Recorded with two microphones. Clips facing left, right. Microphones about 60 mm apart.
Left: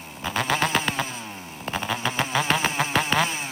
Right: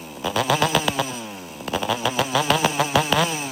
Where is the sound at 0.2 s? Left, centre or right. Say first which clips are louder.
Right 3 dB; left.